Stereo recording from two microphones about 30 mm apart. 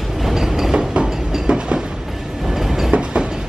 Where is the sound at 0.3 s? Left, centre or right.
Centre.